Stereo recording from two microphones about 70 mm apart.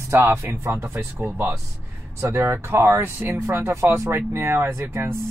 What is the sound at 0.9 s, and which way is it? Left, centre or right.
Speech, right.